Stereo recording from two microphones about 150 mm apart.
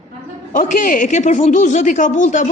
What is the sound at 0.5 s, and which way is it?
Speech, 60° left (ahead or behind).